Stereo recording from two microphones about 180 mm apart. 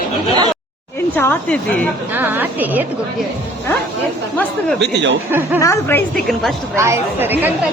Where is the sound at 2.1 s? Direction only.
10° right (ahead or behind).